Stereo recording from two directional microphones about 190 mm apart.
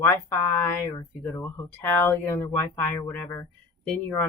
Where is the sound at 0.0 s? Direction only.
10° left (ahead or behind).